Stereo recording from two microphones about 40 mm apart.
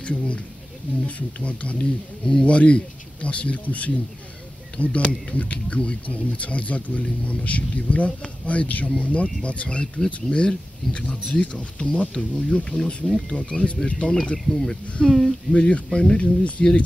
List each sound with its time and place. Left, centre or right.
0.0 s speech: left
14.3 s speech: centre
15.5 s speech: left